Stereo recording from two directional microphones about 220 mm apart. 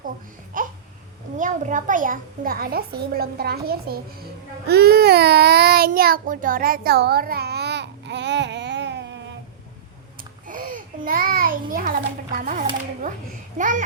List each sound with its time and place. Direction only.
0.6 s a sound: 35° right (ahead or behind)
1.4 s a child's voice: 35° right (ahead or behind)
4.6 s child singing: 45° right (ahead or behind)
10.4 s babbling: 40° right (ahead or behind)
13.6 s a child's voice: 35° right (ahead or behind)